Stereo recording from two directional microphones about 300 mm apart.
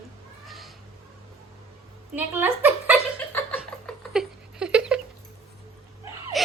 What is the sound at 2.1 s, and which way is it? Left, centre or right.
Speech, centre.